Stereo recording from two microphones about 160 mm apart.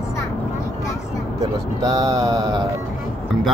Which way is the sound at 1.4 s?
20° right (ahead or behind).